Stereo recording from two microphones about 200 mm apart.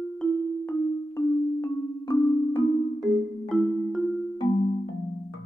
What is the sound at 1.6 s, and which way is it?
Music, 15° left (ahead or behind).